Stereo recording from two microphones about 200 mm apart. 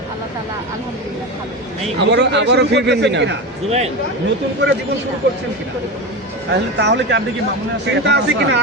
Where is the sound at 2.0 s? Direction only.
60° right (ahead or behind).